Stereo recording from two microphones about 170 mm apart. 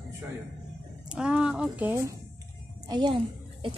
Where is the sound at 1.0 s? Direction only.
5° right (ahead or behind).